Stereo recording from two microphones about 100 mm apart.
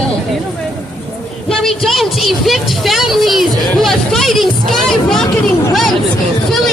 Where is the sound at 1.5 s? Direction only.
5° left (ahead or behind).